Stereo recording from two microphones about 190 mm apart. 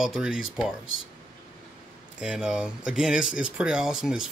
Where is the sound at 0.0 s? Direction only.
5° right (ahead or behind).